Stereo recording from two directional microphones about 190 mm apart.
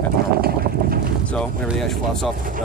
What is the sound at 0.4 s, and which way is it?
Boat, 50° right (ahead or behind).